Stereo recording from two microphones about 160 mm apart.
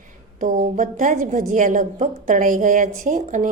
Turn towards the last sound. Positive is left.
turn(degrees=-55)  # may be behind; listen again after turning